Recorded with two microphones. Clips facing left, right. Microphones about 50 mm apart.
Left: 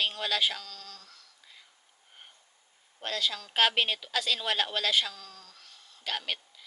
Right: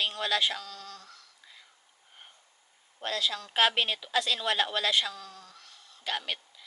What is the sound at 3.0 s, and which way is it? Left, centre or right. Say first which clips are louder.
A woman's voice: right 1 dB; centre.